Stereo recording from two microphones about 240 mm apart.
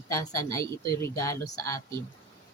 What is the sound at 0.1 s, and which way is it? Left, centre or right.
Speech, centre.